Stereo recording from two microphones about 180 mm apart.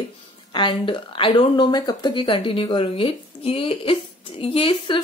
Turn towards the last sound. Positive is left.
turn(degrees=30)  # may be behind; listen again after turning